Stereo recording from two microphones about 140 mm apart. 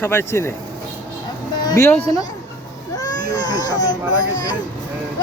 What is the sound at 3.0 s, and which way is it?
Baby cry, 30° left (ahead or behind).